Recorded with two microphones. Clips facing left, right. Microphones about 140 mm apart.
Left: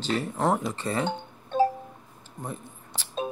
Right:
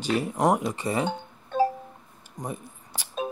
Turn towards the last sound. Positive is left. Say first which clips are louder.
# even
turn(degrees=-10)  # may be behind; listen again after turning